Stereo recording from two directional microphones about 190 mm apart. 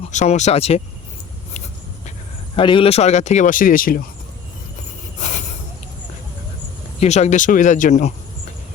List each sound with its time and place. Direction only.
0.1 s speech: 40° left (ahead or behind)
2.6 s speech: 25° left (ahead or behind); by 4.0 s 50° left (ahead or behind)
7.0 s speech: 35° left (ahead or behind)